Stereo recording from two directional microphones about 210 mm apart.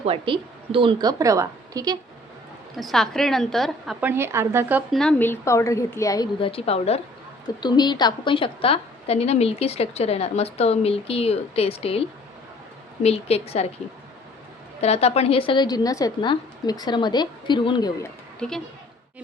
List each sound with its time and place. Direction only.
0.0 s a woman's voice: 25° right (ahead or behind)
2.7 s a woman's voice: centre (ahead or behind)
4.1 s speech: 10° right (ahead or behind)
4.9 s a woman's voice: 5° left (ahead or behind); by 13.7 s 30° left (ahead or behind)
14.8 s a woman's voice: 30° left (ahead or behind)
18.3 s speech: 5° left (ahead or behind)